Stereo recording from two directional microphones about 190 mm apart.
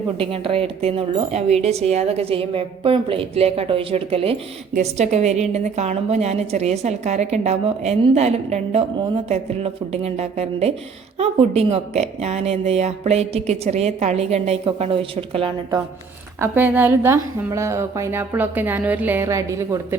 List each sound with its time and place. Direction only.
0.2 s a woman's voice: 30° right (ahead or behind)
16.4 s a woman's voice: 10° right (ahead or behind)